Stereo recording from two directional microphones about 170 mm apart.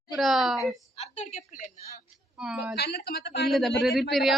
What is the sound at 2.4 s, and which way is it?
Speech, 5° right (ahead or behind).